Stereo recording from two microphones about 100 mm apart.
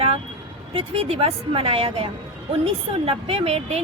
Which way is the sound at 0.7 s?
70° right (ahead or behind).